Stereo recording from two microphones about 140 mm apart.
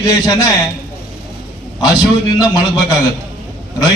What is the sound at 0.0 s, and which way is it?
Speech, 25° left (ahead or behind).